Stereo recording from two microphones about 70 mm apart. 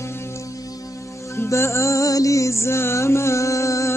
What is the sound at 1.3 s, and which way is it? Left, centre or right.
Music, left.